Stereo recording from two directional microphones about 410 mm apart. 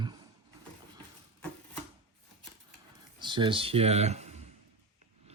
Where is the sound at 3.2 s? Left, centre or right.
Centre.